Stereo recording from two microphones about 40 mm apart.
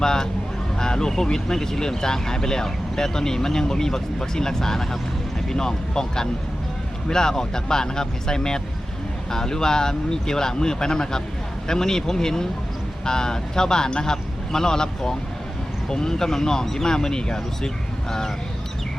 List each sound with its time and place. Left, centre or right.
0.0 s speech: centre